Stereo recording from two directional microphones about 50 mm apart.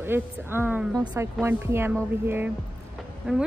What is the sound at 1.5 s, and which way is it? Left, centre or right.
A woman's voice, right.